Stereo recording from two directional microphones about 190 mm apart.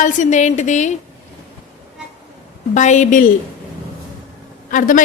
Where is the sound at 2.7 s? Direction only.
40° left (ahead or behind).